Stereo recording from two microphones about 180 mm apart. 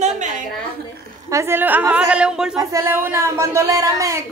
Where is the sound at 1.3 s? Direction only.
15° right (ahead or behind).